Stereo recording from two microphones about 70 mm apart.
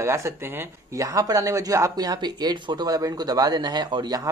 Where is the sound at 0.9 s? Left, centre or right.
Right.